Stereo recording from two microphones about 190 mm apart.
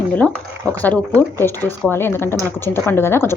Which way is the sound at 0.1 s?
5° left (ahead or behind).